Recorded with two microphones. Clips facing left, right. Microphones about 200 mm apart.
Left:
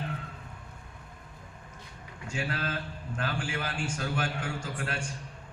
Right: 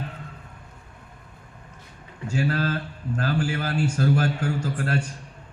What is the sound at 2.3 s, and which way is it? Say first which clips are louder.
A man's voice: right 9 dB; 40° right (ahead or behind).